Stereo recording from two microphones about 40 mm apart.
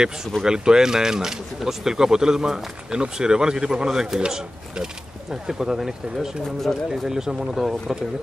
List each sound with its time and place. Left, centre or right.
0.4 s speech: centre
6.4 s speech: centre
7.1 s speech: centre